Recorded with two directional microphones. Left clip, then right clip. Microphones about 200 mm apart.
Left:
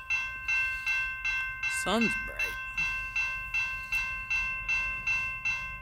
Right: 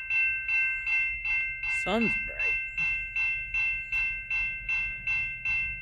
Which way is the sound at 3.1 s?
50° left (ahead or behind).